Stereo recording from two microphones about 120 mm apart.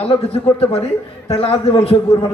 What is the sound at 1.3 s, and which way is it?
Speech, 55° left (ahead or behind).